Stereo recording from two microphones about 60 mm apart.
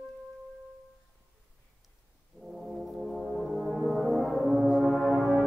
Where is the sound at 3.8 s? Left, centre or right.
Centre.